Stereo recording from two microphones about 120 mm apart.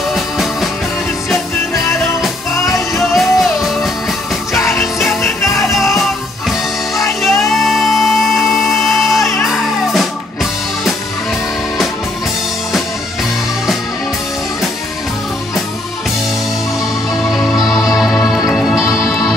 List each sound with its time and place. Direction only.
0.1 s music: centre (ahead or behind)
3.0 s music: centre (ahead or behind)
4.6 s music: 25° left (ahead or behind)
5.6 s music: centre (ahead or behind)
7.2 s music: centre (ahead or behind)
17.9 s music: centre (ahead or behind)